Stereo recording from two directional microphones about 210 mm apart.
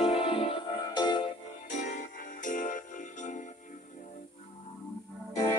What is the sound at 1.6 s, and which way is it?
Music, 35° left (ahead or behind).